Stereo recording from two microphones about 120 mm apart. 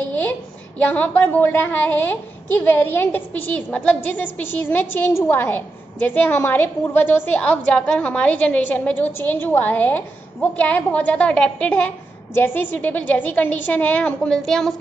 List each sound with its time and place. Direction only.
0.0 s a woman's voice: 10° left (ahead or behind)